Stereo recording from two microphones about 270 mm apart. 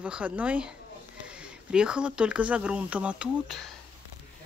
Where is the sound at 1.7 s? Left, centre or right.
Centre.